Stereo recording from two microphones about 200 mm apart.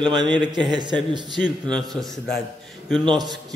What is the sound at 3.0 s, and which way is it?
Speech, 20° right (ahead or behind).